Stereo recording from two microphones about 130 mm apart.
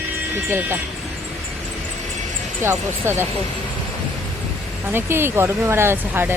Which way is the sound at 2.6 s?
20° right (ahead or behind).